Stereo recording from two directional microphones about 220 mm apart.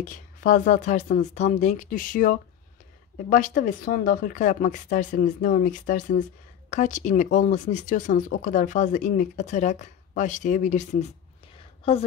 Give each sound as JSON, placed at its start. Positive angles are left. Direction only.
{"t": 0.1, "sound": "speech", "side_deg": 35}